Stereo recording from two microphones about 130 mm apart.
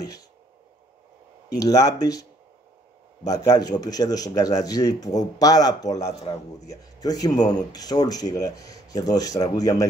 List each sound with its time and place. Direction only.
1.6 s speech: 30° left (ahead or behind)
3.3 s speech: 30° left (ahead or behind)